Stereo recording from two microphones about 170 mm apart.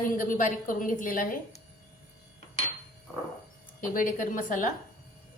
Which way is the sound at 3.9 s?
50° left (ahead or behind).